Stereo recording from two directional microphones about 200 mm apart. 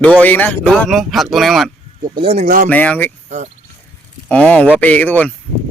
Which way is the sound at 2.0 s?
25° right (ahead or behind).